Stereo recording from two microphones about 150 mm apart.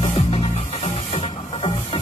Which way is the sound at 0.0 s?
40° left (ahead or behind).